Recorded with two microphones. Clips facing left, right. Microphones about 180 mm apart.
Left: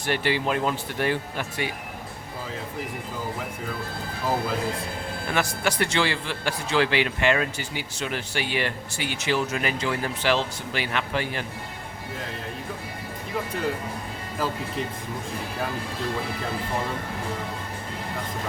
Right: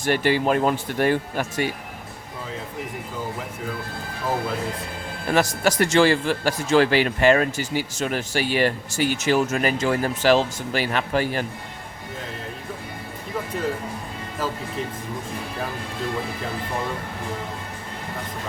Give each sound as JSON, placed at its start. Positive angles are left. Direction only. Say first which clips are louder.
{"t": 0.0, "sound": "a man's voice", "louder": "right 5 dB", "side_deg": -45}
{"t": 5.3, "sound": "a man's voice", "louder": "right 6 dB", "side_deg": -40}